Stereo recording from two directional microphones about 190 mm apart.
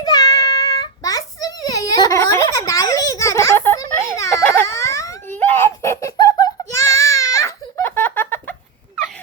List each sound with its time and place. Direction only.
0.0 s child singing: 20° left (ahead or behind)